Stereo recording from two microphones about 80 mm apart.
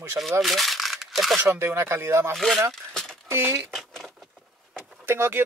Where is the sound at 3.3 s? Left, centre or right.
Right.